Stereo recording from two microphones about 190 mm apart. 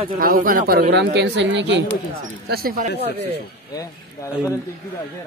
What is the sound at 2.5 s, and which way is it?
Speech, 50° right (ahead or behind).